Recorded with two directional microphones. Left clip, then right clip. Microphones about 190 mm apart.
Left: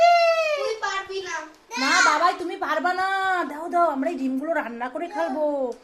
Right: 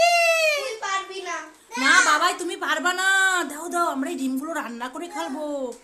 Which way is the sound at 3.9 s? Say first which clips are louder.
Left 2 dB; 20° right (ahead or behind).